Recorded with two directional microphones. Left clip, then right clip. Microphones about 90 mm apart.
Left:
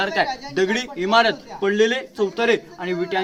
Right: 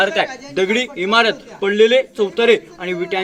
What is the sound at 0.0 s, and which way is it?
Speech, 45° left (ahead or behind).